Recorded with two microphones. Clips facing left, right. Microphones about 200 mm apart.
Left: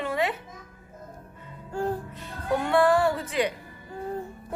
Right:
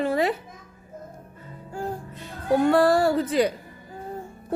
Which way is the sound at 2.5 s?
40° right (ahead or behind).